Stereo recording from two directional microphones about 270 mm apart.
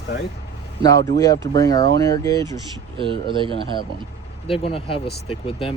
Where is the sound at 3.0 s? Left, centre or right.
Centre.